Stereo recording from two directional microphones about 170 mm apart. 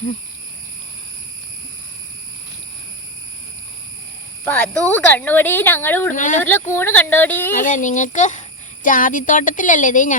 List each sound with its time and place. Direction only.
4.4 s speech: 10° left (ahead or behind)
6.1 s a child's voice: 50° left (ahead or behind)
6.7 s speech: 15° left (ahead or behind)
7.6 s a child's voice: 50° left (ahead or behind)